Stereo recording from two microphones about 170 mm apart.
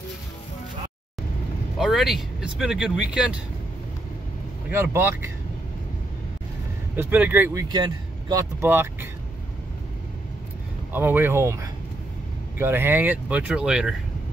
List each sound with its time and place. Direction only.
1.8 s speech: centre (ahead or behind)
4.6 s speech: 15° right (ahead or behind)
7.0 s speech: 10° right (ahead or behind)
7.6 s speech: 25° right (ahead or behind)
10.9 s speech: 10° right (ahead or behind)